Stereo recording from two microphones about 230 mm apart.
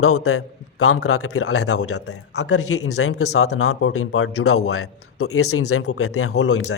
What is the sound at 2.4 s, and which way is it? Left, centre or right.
Speech, left.